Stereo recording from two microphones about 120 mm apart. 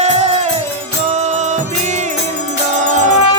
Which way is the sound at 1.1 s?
80° right.